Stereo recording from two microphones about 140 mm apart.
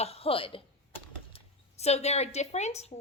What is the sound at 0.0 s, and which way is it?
A woman's voice, 45° left (ahead or behind).